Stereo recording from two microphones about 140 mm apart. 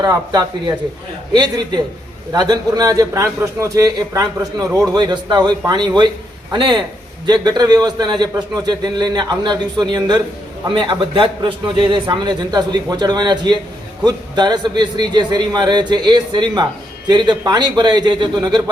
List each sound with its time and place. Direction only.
0.0 s a man's voice: 30° right (ahead or behind)